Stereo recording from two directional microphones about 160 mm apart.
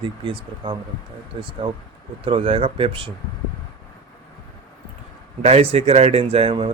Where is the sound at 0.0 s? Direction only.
30° right (ahead or behind).